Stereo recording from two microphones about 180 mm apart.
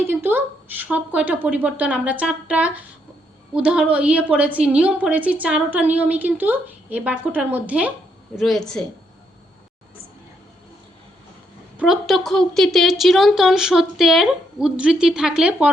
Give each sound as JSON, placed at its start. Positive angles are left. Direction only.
{"t": 0.0, "sound": "a woman's voice", "side_deg": -10}
{"t": 11.8, "sound": "a woman's voice", "side_deg": 0}